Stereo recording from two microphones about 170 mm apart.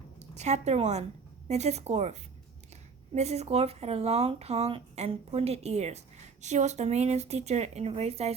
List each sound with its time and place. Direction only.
0.2 s a woman's voice: 40° right (ahead or behind)
3.2 s speech: 40° right (ahead or behind)